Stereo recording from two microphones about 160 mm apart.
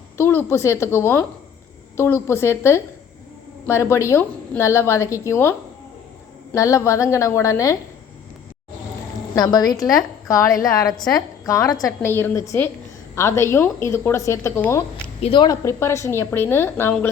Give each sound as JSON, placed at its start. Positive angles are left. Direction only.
{"t": 0.2, "sound": "a woman's voice", "side_deg": 15}
{"t": 9.3, "sound": "a woman's voice", "side_deg": 25}
{"t": 15.2, "sound": "a woman's voice", "side_deg": 30}